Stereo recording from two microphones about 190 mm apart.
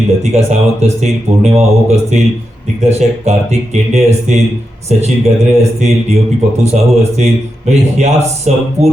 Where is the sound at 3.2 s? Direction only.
35° right (ahead or behind).